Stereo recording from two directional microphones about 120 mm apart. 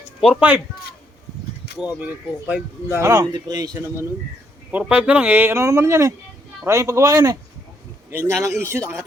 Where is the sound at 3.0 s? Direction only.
30° right (ahead or behind).